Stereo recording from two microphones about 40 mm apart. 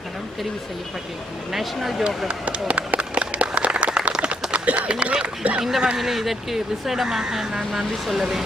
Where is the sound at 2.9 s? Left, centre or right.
Right.